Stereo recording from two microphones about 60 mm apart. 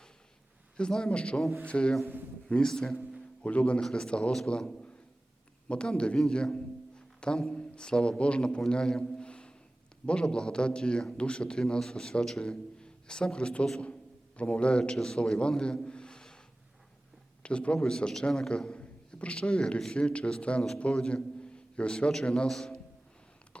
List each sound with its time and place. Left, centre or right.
0.8 s a man's voice: centre
3.4 s a man's voice: left
17.4 s a man's voice: centre